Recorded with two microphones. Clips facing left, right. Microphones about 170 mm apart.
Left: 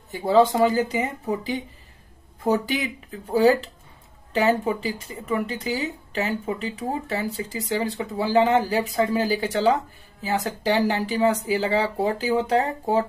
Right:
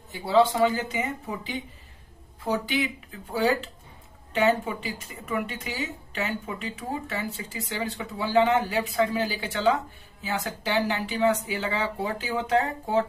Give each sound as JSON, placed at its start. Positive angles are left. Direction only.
{"t": 0.1, "sound": "speech", "side_deg": 45}